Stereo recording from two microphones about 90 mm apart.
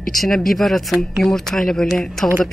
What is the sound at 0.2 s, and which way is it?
A man's voice, centre (ahead or behind).